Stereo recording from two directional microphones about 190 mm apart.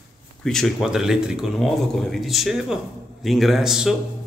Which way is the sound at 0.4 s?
Centre (ahead or behind).